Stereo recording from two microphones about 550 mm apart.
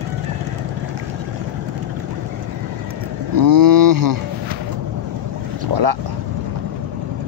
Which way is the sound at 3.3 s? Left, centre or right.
Right.